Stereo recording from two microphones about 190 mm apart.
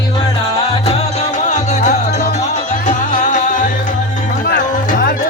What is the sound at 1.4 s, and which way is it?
Music, 40° left (ahead or behind).